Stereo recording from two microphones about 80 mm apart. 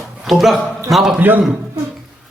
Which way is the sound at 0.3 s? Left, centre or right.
Centre.